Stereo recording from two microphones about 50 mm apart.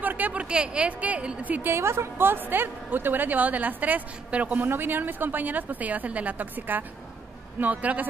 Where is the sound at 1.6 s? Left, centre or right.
Right.